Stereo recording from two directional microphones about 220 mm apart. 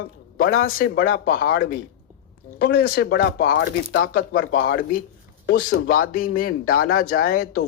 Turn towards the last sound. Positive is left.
turn(degrees=40)  # may be behind; listen again after turning